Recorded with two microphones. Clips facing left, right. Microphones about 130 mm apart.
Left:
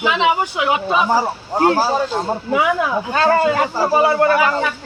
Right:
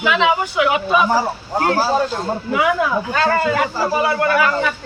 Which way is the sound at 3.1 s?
25° left (ahead or behind).